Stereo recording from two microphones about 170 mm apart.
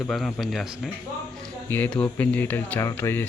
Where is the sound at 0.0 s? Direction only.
Centre (ahead or behind).